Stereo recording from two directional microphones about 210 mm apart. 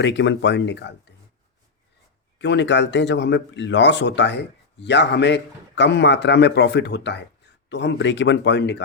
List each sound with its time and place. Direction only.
0.0 s a man's voice: 60° left (ahead or behind)
2.4 s a man's voice: 55° left (ahead or behind)